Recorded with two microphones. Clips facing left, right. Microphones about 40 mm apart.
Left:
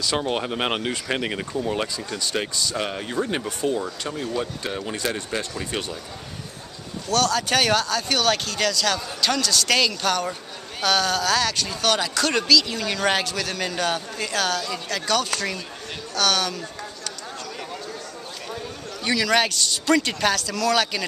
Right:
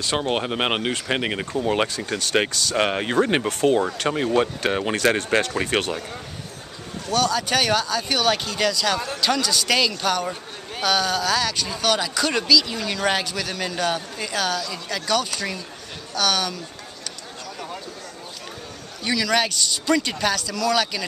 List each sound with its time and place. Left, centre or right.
0.2 s speech: right
1.9 s speech: right
7.1 s speech: centre
19.0 s speech: centre